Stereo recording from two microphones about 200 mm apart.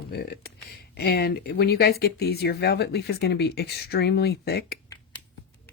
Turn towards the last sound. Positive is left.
turn(degrees=55)  # may be behind; listen again after turning